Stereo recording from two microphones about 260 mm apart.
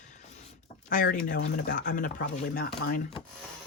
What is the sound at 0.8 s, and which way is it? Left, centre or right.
Speech, left.